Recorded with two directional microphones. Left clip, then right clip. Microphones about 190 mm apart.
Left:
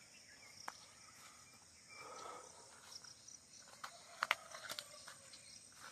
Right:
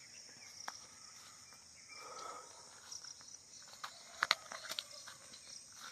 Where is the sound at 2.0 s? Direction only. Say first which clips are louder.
Right 3 dB; centre (ahead or behind).